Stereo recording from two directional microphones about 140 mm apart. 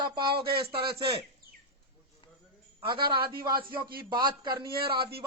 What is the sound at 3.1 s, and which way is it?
Speech, 90° right.